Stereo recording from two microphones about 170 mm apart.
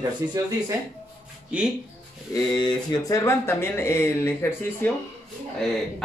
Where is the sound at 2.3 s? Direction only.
25° left (ahead or behind).